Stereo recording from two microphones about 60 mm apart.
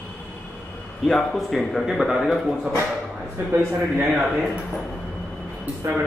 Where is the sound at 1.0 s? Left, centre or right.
Centre.